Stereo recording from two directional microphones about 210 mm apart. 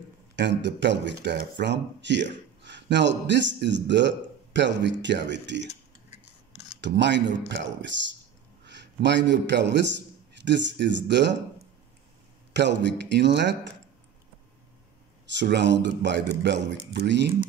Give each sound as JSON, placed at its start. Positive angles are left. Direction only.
{"t": 0.4, "sound": "speech", "side_deg": -55}
{"t": 5.7, "sound": "cutlery", "side_deg": 30}
{"t": 6.8, "sound": "a man's voice", "side_deg": -55}
{"t": 12.5, "sound": "speech", "side_deg": -55}
{"t": 15.2, "sound": "speech", "side_deg": -55}